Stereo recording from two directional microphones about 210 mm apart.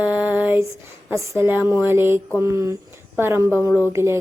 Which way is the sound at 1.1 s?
15° right (ahead or behind).